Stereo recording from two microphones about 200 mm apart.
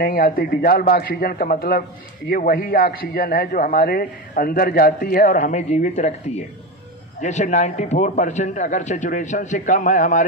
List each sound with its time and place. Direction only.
0.0 s a man's voice: 45° left (ahead or behind)